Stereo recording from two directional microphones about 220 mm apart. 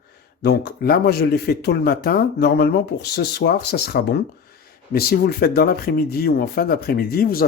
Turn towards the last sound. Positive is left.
turn(degrees=45)  # may be behind; listen again after turning